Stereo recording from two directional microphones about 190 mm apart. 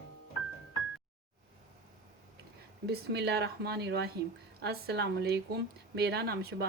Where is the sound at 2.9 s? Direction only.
60° right (ahead or behind).